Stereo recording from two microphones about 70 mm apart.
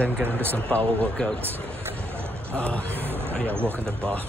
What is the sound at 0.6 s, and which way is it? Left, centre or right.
Speech, centre.